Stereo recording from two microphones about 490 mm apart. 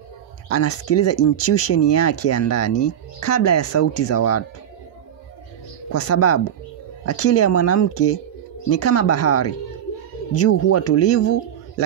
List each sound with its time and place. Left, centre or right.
0.5 s speech: left
5.9 s speech: left